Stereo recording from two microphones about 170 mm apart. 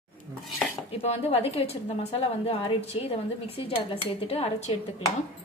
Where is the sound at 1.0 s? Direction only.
35° left (ahead or behind).